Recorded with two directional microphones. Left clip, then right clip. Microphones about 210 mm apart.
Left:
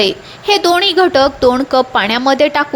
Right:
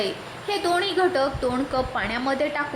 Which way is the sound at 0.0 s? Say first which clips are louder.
Left 13 dB; 40° left (ahead or behind).